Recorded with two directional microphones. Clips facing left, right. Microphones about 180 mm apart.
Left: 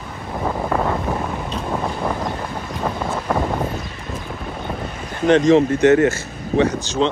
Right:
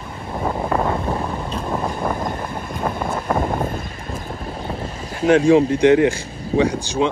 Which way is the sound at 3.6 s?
50° right (ahead or behind).